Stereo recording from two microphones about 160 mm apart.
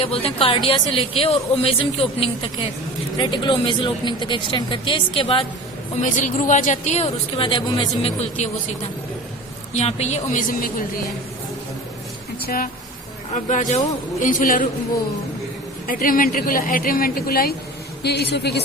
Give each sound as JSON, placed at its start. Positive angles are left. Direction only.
{"t": 0.0, "sound": "speech", "side_deg": 35}
{"t": 6.0, "sound": "speech", "side_deg": 50}
{"t": 8.4, "sound": "speech", "side_deg": 45}
{"t": 9.7, "sound": "speech", "side_deg": 45}
{"t": 12.4, "sound": "a sound", "side_deg": 65}
{"t": 13.3, "sound": "speech", "side_deg": 50}
{"t": 15.9, "sound": "speech", "side_deg": 60}
{"t": 18.0, "sound": "a woman's voice", "side_deg": 90}